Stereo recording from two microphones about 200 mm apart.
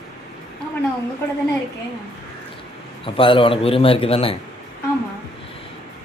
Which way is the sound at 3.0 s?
25° left (ahead or behind).